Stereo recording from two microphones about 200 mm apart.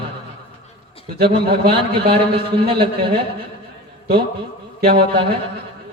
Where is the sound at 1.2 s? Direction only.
55° right (ahead or behind).